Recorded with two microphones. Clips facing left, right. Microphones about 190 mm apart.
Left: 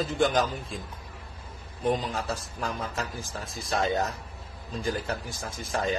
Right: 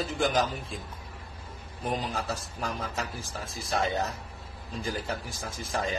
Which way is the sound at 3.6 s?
30° left (ahead or behind).